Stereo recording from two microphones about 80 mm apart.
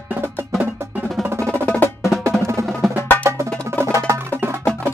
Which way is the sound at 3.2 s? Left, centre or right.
Right.